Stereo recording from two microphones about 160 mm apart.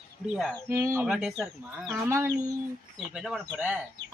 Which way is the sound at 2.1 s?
15° right (ahead or behind).